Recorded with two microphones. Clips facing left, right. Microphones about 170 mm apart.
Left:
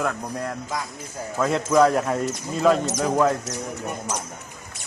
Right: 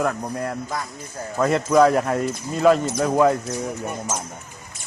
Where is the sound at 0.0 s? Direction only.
5° right (ahead or behind).